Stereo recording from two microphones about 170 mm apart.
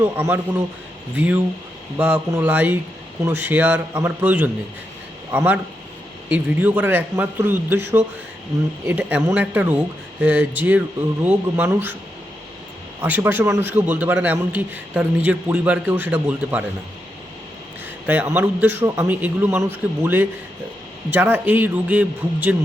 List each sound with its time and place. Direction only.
0.0 s a man's voice: 15° right (ahead or behind)
13.0 s a man's voice: 10° right (ahead or behind)
18.0 s a man's voice: 10° right (ahead or behind)